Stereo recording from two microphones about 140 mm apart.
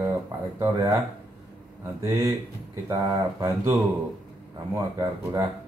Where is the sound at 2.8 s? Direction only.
25° right (ahead or behind).